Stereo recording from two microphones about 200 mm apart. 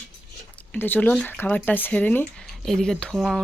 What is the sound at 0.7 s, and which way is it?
Speech, 10° left (ahead or behind).